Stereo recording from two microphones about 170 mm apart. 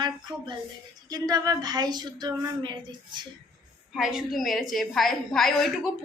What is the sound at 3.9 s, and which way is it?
A woman's voice, centre (ahead or behind).